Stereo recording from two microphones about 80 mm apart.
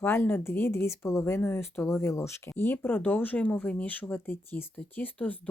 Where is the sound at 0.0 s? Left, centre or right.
Left.